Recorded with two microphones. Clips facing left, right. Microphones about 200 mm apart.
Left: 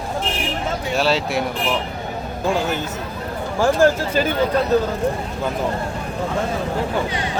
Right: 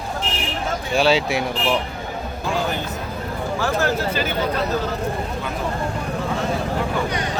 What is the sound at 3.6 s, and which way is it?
Speech, 45° left (ahead or behind).